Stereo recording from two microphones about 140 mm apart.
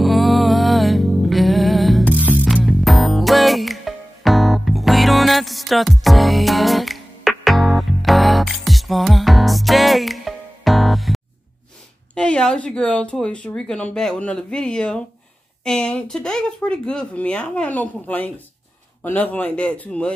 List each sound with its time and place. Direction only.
0.0 s music: centre (ahead or behind)
2.1 s music: 10° right (ahead or behind)
2.4 s music: centre (ahead or behind)
12.2 s speech: 5° left (ahead or behind)